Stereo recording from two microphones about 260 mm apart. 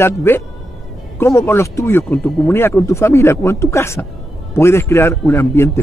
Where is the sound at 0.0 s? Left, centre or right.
Centre.